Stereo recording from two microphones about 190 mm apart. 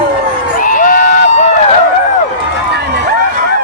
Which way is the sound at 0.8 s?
45° left (ahead or behind).